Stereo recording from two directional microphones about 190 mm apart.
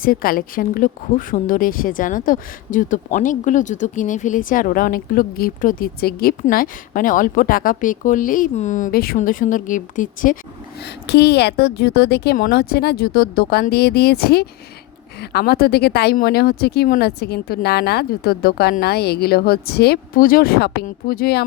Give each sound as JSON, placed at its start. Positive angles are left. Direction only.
{"t": 0.0, "sound": "a woman's voice", "side_deg": 50}
{"t": 10.8, "sound": "speech", "side_deg": 60}